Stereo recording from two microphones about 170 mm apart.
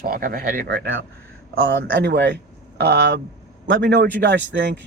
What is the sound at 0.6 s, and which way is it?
A man's voice, 90° right.